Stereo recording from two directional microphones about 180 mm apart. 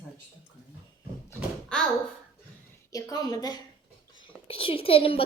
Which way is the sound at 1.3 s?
5° left (ahead or behind).